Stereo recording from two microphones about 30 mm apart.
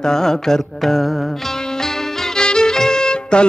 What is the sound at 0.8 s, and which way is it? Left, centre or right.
Speech, centre.